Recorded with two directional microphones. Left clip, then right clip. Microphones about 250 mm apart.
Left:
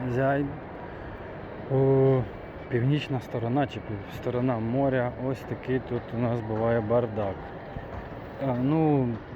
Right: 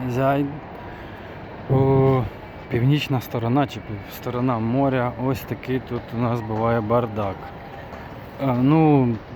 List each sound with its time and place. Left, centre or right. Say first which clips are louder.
0.1 s speech: right 5 dB; centre
1.7 s speech: right 4 dB; centre
8.4 s speech: right 7 dB; right